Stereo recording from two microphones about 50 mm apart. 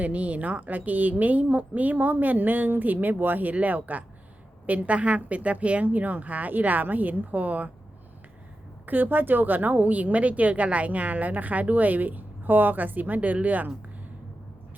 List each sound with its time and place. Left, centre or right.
0.0 s a woman's voice: right
8.9 s a woman's voice: right